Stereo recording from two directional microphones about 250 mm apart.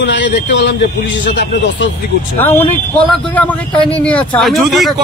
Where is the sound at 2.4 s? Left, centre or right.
Centre.